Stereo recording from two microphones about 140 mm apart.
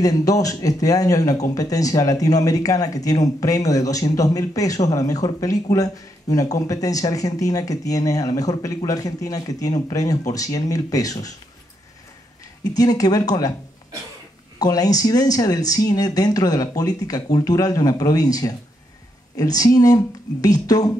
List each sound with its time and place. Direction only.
0.0 s speech: 25° left (ahead or behind)
12.6 s speech: 25° left (ahead or behind)
14.6 s speech: 25° left (ahead or behind)